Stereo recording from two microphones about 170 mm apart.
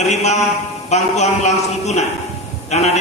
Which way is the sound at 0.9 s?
40° left (ahead or behind).